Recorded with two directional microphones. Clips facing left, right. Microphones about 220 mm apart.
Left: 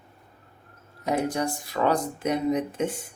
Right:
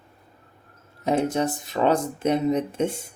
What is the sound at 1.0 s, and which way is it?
Speech, 25° right (ahead or behind).